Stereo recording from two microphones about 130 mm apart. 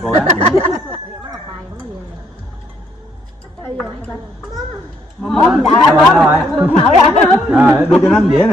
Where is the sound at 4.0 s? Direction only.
10° left (ahead or behind).